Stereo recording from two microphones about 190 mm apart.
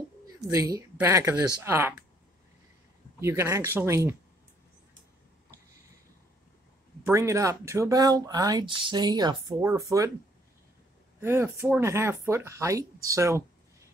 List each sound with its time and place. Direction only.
0.5 s speech: 15° right (ahead or behind)
3.2 s speech: 15° right (ahead or behind)
7.1 s speech: 15° right (ahead or behind)
11.1 s speech: 10° right (ahead or behind)